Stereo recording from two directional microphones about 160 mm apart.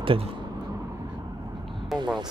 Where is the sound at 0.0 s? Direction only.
35° right (ahead or behind).